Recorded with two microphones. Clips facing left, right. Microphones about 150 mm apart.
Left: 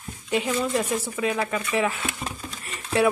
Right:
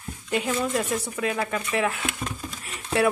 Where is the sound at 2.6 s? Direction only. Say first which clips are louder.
Left 1 dB; centre (ahead or behind).